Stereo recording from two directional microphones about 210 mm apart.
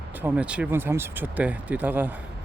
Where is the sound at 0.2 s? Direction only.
5° right (ahead or behind).